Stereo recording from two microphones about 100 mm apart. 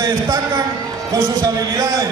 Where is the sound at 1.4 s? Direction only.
35° right (ahead or behind).